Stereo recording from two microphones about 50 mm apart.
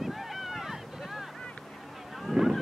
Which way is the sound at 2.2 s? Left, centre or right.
Centre.